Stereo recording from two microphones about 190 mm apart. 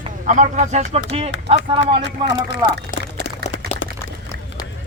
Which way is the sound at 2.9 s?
45° left (ahead or behind).